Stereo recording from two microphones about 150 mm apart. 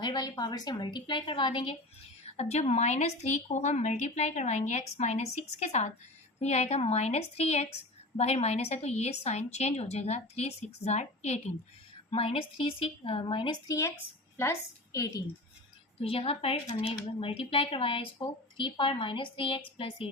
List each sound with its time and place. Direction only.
0.0 s a woman's voice: 30° left (ahead or behind)
2.2 s a woman's voice: 45° left (ahead or behind); by 15.2 s 20° left (ahead or behind)
16.0 s a woman's voice: 40° left (ahead or behind)